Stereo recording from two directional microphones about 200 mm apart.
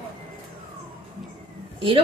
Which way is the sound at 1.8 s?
25° right (ahead or behind).